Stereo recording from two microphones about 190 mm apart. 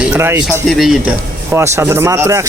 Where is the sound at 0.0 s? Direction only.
10° right (ahead or behind).